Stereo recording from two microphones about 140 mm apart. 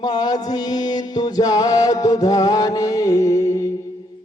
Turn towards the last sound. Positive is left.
turn(degrees=20)  # may be behind; listen again after turning